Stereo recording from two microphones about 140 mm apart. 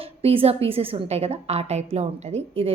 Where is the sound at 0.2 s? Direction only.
45° right (ahead or behind).